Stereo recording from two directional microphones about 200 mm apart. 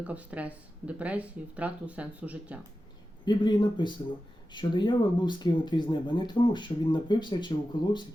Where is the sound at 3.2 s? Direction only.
20° left (ahead or behind).